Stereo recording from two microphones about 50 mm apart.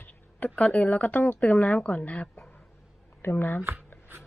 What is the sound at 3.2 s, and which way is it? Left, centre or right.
Speech, left.